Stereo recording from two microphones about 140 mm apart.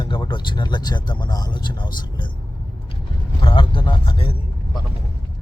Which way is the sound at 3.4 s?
35° left (ahead or behind).